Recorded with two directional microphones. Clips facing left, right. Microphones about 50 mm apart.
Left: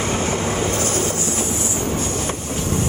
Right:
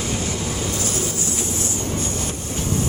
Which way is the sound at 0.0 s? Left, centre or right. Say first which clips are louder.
Left 5 dB; left.